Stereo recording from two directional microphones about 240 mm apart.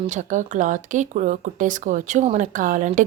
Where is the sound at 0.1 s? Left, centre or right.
Right.